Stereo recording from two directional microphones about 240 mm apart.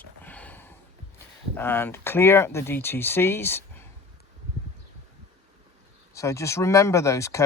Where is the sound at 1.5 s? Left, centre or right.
Centre.